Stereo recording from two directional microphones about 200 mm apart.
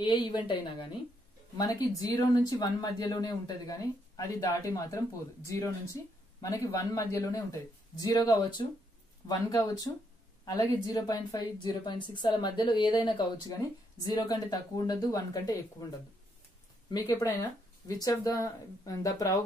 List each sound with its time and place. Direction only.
0.0 s a woman's voice: 25° left (ahead or behind)